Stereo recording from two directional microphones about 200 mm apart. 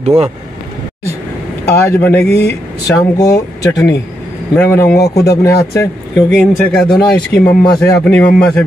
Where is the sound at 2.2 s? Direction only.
55° left (ahead or behind).